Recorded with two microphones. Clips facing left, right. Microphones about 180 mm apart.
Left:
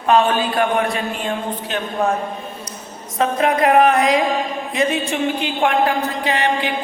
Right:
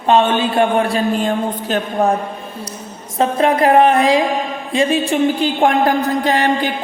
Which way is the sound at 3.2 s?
30° right (ahead or behind).